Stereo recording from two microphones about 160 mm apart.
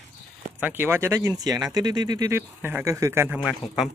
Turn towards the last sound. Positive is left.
turn(degrees=-5)  # may be behind; listen again after turning